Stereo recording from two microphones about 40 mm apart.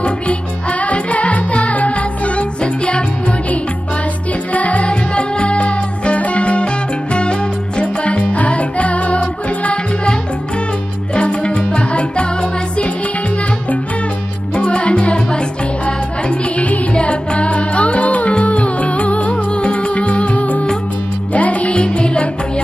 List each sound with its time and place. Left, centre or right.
0.0 s music: left
11.1 s music: left
14.5 s music: left
21.7 s music: left